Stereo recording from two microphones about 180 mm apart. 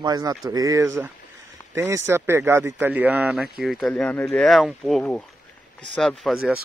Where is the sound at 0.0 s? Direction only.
20° right (ahead or behind).